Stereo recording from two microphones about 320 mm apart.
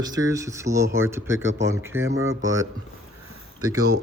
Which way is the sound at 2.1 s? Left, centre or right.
Right.